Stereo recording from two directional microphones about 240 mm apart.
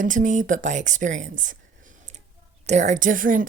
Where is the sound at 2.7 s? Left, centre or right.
Right.